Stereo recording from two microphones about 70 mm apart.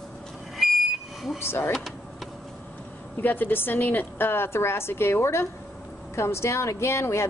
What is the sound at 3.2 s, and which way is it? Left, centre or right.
A woman's voice, left.